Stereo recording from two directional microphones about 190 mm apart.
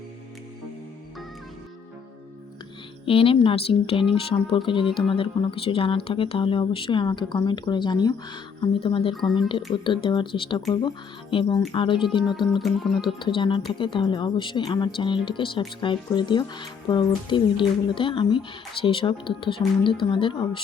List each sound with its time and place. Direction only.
3.1 s speech: 30° left (ahead or behind)
12.4 s music: centre (ahead or behind)
13.1 s speech: 25° left (ahead or behind)